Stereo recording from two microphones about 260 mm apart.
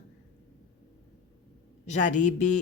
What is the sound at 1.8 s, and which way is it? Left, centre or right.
Speech, left.